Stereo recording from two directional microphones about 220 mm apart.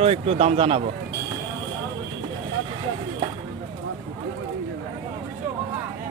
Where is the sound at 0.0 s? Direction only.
25° right (ahead or behind).